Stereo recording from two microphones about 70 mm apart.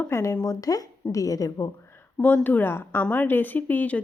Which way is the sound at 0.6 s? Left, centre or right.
Left.